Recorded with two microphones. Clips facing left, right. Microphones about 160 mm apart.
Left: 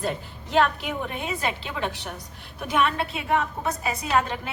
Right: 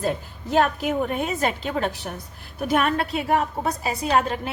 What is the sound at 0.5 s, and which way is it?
A woman's voice, 40° right (ahead or behind).